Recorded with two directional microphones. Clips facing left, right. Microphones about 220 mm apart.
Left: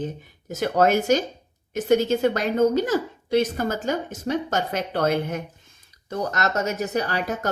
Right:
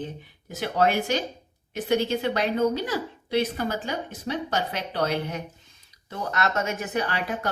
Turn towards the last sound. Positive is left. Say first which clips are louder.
# left 3 dB
turn(degrees=40)  # may be behind; listen again after turning